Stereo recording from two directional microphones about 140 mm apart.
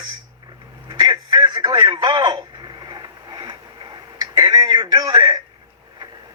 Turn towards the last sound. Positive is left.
turn(degrees=-30)  # may be behind; listen again after turning